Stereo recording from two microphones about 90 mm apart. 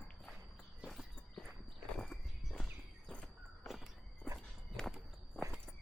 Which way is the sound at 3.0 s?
5° left (ahead or behind).